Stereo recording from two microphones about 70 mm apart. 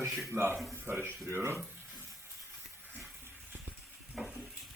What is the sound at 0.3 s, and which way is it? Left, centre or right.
Speech, right.